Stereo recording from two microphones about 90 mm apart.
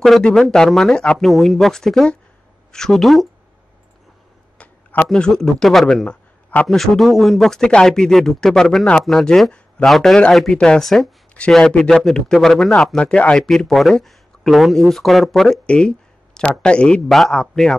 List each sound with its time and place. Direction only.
0.0 s speech: 5° left (ahead or behind)
4.6 s a sound: 20° left (ahead or behind)
5.1 s a man's voice: 5° left (ahead or behind)
6.8 s speech: centre (ahead or behind)
13.0 s speech: 15° left (ahead or behind)